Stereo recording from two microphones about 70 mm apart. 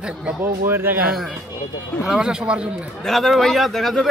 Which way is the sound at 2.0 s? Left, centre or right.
Centre.